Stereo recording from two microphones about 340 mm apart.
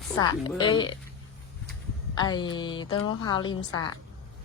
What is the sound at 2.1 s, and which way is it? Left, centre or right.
A woman's voice, centre.